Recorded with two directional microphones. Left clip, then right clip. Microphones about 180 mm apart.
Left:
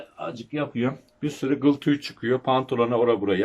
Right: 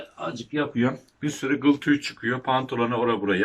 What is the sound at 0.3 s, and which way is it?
Speech, centre (ahead or behind).